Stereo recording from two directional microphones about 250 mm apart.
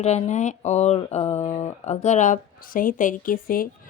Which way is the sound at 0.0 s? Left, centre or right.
Left.